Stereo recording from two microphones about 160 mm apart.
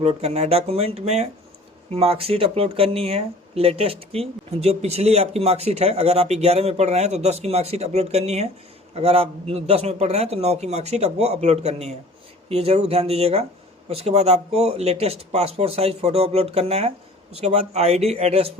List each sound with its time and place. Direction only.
0.0 s a man's voice: 40° right (ahead or behind)